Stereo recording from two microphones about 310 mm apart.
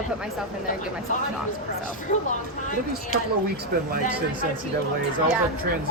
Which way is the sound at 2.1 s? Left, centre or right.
Left.